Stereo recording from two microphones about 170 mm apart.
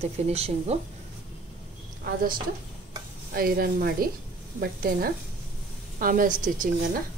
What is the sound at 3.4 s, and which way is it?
A woman's voice, 60° right (ahead or behind).